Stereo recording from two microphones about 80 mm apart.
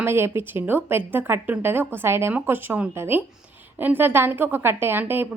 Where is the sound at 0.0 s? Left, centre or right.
Right.